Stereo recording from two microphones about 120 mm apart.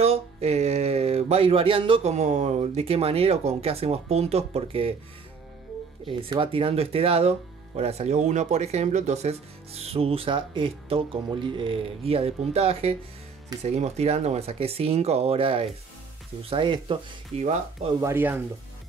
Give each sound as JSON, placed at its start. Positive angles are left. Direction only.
{"t": 0.0, "sound": "a sound", "side_deg": -60}
{"t": 2.1, "sound": "speech", "side_deg": -70}
{"t": 6.4, "sound": "speech", "side_deg": -50}
{"t": 13.6, "sound": "speech", "side_deg": -70}
{"t": 17.4, "sound": "speech", "side_deg": -65}
{"t": 18.0, "sound": "speech", "side_deg": -15}